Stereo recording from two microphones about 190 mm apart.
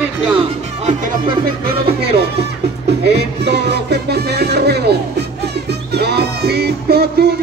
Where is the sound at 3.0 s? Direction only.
60° right (ahead or behind).